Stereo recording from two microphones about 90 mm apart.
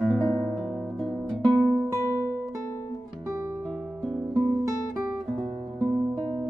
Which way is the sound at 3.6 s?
5° right (ahead or behind).